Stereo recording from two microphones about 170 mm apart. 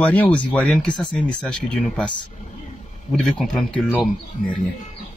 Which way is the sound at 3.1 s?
Centre (ahead or behind).